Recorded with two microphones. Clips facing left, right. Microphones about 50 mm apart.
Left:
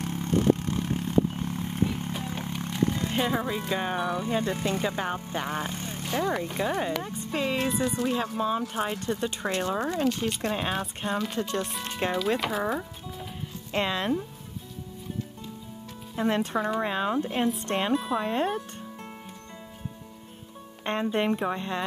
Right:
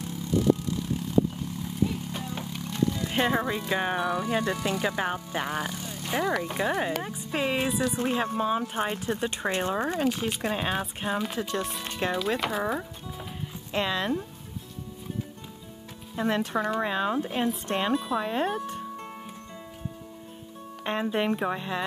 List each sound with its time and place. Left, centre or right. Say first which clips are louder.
0.0 s vehicle: left 1 dB; left
2.8 s a sound: even; left
3.1 s speech: right 1 dB; centre
4.2 s speech: even; right
5.6 s vehicle: even; left
6.0 s speech: right 1 dB; centre
9.9 s speech: even; centre
16.2 s speech: left 1 dB; centre
20.8 s speech: left 1 dB; centre